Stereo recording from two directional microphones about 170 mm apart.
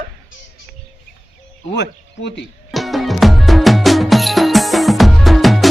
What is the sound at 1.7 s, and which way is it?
Speech, 90° left.